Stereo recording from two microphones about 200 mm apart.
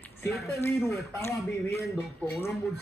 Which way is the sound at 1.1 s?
10° left (ahead or behind).